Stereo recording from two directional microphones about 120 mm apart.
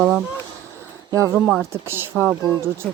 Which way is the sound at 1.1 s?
25° right (ahead or behind).